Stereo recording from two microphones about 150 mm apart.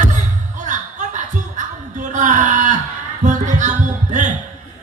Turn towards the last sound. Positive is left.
turn(degrees=-55)  # may be behind; listen again after turning